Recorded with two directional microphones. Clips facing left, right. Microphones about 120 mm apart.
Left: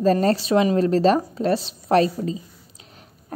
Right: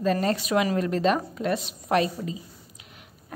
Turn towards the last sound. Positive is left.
turn(degrees=35)  # may be behind; listen again after turning